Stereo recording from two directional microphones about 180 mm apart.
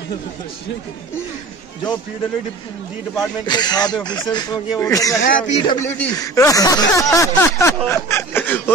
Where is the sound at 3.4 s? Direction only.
25° left (ahead or behind).